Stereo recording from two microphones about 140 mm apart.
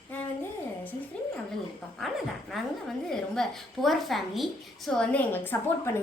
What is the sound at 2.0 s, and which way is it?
A woman's voice, centre (ahead or behind).